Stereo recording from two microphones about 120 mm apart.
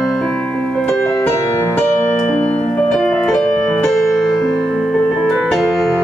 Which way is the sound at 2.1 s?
10° left (ahead or behind).